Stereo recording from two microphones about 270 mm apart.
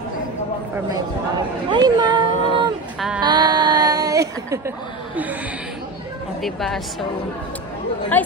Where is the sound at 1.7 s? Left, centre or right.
Centre.